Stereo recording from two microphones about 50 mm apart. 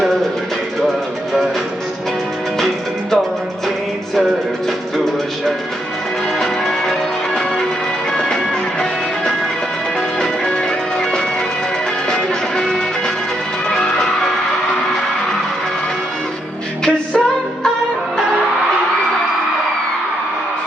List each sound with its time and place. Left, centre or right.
6.4 s music: centre
8.1 s music: centre
10.2 s music: centre
12.0 s music: centre
13.7 s music: centre
16.8 s music: centre